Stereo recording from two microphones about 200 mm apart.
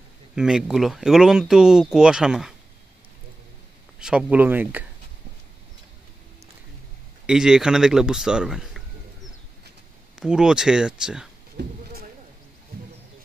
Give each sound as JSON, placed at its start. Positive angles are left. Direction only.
{"t": 0.4, "sound": "speech", "side_deg": -5}
{"t": 4.0, "sound": "speech", "side_deg": -5}
{"t": 7.2, "sound": "speech", "side_deg": -5}
{"t": 10.1, "sound": "speech", "side_deg": -5}
{"t": 11.5, "sound": "sheep", "side_deg": -50}